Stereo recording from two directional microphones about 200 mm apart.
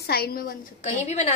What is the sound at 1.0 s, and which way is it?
Speech, 35° left (ahead or behind).